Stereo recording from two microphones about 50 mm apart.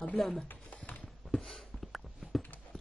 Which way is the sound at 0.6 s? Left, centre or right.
Left.